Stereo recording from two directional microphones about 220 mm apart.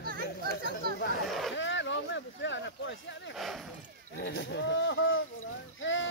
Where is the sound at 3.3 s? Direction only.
Centre (ahead or behind).